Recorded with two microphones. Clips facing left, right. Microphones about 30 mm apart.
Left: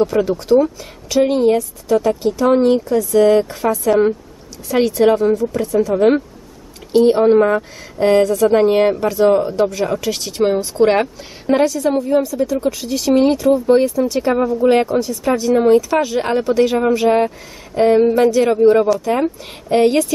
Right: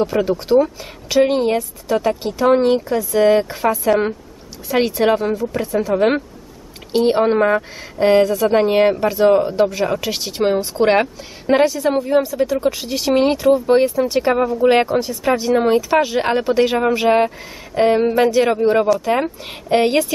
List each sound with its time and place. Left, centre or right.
0.0 s a woman's voice: centre